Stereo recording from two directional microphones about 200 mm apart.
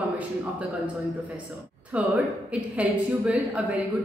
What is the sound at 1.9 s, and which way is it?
A woman's voice, 5° right (ahead or behind).